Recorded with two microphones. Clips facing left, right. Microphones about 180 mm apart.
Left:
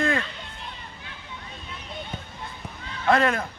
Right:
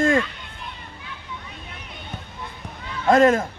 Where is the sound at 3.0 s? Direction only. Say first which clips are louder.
Right 6 dB; 45° right (ahead or behind).